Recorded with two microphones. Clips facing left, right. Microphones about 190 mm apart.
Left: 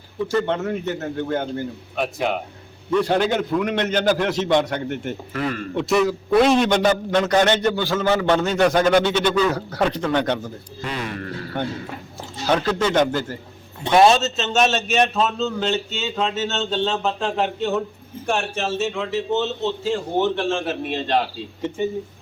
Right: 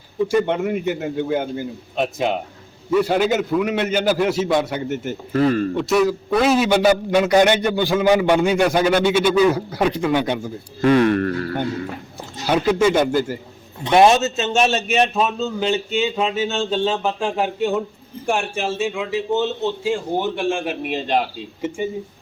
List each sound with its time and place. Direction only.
0.2 s a man's voice: 15° right (ahead or behind)
2.0 s speech: 20° right (ahead or behind)
2.9 s a man's voice: 5° right (ahead or behind)
5.3 s speech: 35° right (ahead or behind)
5.7 s a man's voice: centre (ahead or behind)
10.8 s speech: 60° right (ahead or behind)
12.5 s a man's voice: 10° right (ahead or behind)